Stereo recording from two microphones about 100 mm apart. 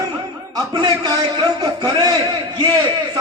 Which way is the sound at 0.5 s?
40° right (ahead or behind).